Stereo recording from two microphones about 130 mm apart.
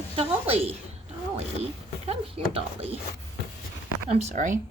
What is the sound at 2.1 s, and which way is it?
Speech, 50° right (ahead or behind).